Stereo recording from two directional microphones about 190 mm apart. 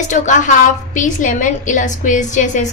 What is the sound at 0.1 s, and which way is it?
A woman's voice, 40° left (ahead or behind).